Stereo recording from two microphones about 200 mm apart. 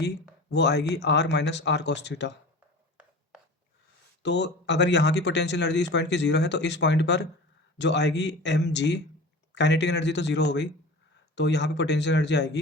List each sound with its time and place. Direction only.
0.5 s speech: 60° left (ahead or behind)
4.2 s speech: 60° left (ahead or behind)